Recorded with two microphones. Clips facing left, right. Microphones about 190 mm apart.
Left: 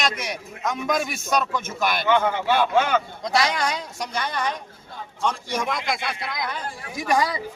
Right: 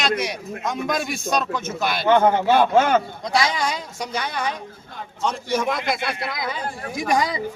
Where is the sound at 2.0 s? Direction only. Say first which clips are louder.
Right 6 dB; 45° right (ahead or behind).